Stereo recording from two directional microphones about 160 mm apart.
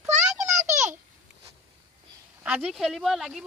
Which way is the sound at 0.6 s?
50° right (ahead or behind).